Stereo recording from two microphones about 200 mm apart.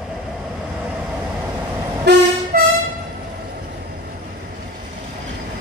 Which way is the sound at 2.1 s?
55° right (ahead or behind).